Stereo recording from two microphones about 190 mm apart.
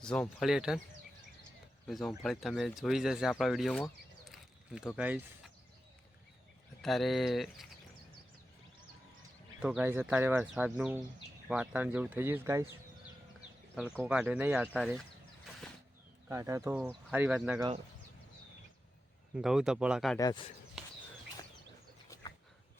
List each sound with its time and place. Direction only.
0.0 s speech: 5° left (ahead or behind)
1.9 s speech: centre (ahead or behind)
4.9 s speech: 5° right (ahead or behind)
6.8 s speech: centre (ahead or behind)
9.6 s speech: 5° right (ahead or behind)
13.7 s speech: 5° right (ahead or behind)
16.3 s speech: 15° right (ahead or behind)
19.4 s speech: centre (ahead or behind)
20.1 s speech: 20° left (ahead or behind)